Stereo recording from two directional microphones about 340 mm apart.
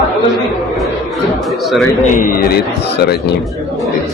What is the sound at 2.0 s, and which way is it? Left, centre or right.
A woman's voice, left.